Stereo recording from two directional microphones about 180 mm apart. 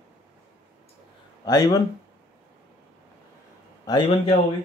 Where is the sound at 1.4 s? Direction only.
20° left (ahead or behind).